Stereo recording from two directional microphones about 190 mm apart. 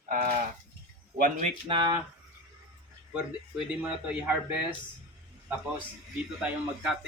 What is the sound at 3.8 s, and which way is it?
Speech, 10° right (ahead or behind).